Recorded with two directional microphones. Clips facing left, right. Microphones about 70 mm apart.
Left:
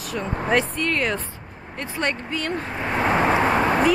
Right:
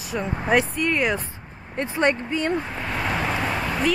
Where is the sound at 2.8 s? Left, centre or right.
Left.